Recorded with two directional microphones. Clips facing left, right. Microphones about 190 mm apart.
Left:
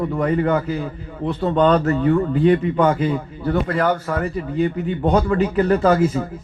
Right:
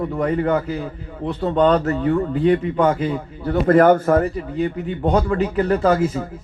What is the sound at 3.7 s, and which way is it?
A man's voice, 50° right (ahead or behind).